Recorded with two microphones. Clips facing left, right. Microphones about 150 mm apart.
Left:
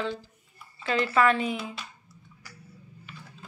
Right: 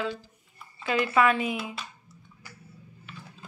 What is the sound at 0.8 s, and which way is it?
Speech, 10° right (ahead or behind).